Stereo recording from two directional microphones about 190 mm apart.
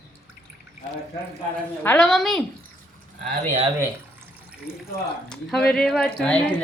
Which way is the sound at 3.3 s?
30° right (ahead or behind).